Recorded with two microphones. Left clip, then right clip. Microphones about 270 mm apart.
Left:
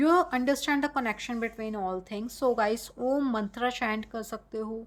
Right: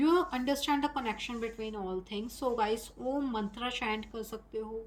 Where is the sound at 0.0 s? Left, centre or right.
Centre.